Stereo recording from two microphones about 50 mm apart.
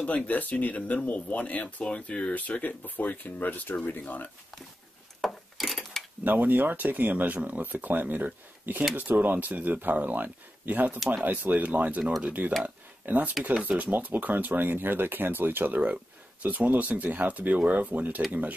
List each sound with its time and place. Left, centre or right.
0.0 s speech: left
5.2 s wood: centre
6.2 s speech: right